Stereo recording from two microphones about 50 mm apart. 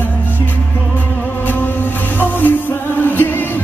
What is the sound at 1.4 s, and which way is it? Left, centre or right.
Music, left.